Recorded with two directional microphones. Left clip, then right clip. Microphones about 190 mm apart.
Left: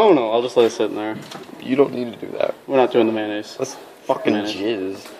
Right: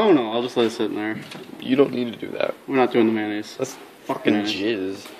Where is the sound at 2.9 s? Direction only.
45° right (ahead or behind).